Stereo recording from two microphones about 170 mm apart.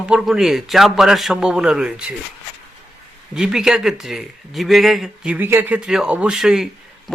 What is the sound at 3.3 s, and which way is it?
Speech, 5° right (ahead or behind).